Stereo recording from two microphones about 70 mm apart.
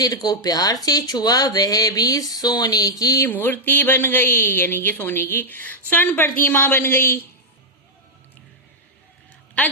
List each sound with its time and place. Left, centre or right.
0.0 s speech: left
3.2 s a woman's voice: left